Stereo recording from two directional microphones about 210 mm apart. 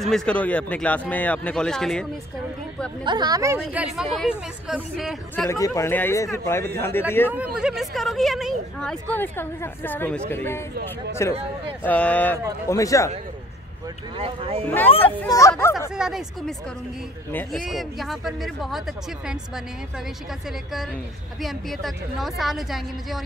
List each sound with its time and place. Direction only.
0.0 s speech: centre (ahead or behind)
3.0 s speech: 20° right (ahead or behind)
3.6 s speech: 5° right (ahead or behind)
5.3 s speech: 10° left (ahead or behind)
7.6 s speech: centre (ahead or behind); by 13.1 s 15° left (ahead or behind)
14.1 s speech: 25° right (ahead or behind)
14.9 s speech: 25° left (ahead or behind)
15.2 s speech: 15° left (ahead or behind)
15.9 s speech: 5° right (ahead or behind)
21.4 s speech: centre (ahead or behind)